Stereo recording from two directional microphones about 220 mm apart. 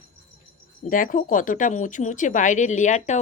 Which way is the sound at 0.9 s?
40° left (ahead or behind).